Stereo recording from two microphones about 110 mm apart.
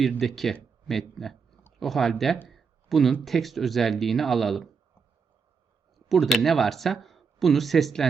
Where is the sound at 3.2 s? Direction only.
Centre (ahead or behind).